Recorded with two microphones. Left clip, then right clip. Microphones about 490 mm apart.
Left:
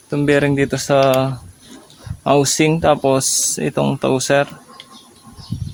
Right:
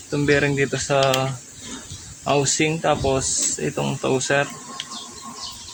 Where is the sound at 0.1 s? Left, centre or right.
Left.